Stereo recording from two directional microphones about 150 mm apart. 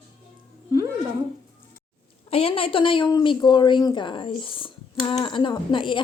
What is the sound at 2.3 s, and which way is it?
A woman's voice, 40° left (ahead or behind).